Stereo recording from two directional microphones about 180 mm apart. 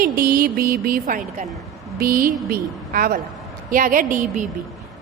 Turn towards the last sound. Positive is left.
turn(degrees=-45)  # may be behind; listen again after turning